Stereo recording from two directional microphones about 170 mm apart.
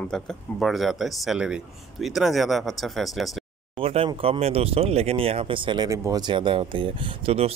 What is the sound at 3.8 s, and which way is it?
Speech, 35° right (ahead or behind).